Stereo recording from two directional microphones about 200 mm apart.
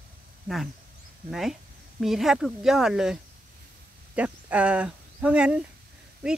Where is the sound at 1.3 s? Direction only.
Centre (ahead or behind).